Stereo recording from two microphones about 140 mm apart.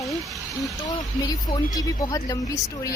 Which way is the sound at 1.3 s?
30° left (ahead or behind).